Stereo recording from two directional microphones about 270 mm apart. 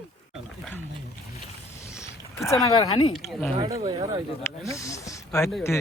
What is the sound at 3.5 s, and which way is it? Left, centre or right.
Speech, centre.